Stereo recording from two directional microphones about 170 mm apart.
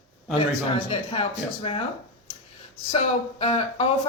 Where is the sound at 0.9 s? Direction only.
35° left (ahead or behind).